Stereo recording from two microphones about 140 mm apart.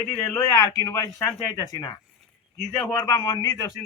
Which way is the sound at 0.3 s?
25° left (ahead or behind).